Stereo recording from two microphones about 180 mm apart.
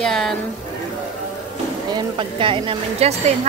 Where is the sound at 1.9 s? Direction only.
25° right (ahead or behind).